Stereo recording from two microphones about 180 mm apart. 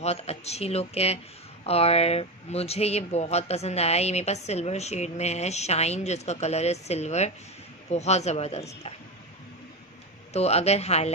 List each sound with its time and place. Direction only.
0.0 s speech: 35° left (ahead or behind)
10.3 s speech: 35° left (ahead or behind)